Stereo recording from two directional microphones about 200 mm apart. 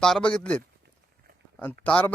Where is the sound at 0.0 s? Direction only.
5° left (ahead or behind).